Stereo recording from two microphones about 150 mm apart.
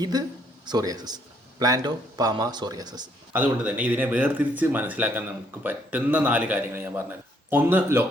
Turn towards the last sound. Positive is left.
turn(degrees=-15)  # may be behind; listen again after turning